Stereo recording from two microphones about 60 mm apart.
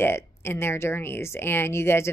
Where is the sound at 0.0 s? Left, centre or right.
Left.